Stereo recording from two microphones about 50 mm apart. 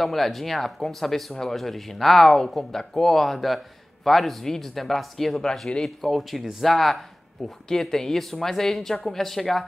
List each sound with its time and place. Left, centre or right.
0.0 s speech: centre
5.5 s speech: centre
6.0 s speech: centre